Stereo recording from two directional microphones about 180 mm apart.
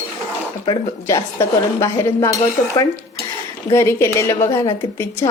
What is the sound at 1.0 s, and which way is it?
A woman's voice, 15° left (ahead or behind).